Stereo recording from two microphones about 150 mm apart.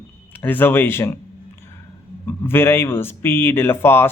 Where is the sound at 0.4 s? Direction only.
15° left (ahead or behind).